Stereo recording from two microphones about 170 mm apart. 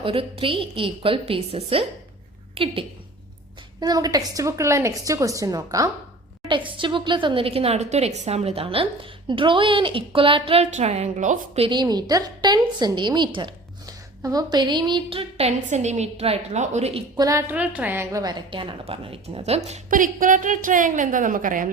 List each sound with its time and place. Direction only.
0.0 s a woman's voice: 30° right (ahead or behind)
3.8 s a woman's voice: 20° right (ahead or behind); by 17.0 s 40° right (ahead or behind)
17.2 s a woman's voice: 20° right (ahead or behind)
17.5 s a woman's voice: 10° right (ahead or behind); by 21.7 s 50° right (ahead or behind)